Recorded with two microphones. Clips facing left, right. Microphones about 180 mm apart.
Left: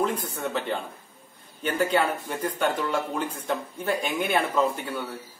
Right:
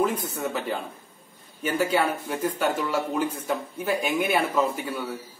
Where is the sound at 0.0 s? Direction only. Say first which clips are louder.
Right 2 dB; 5° right (ahead or behind).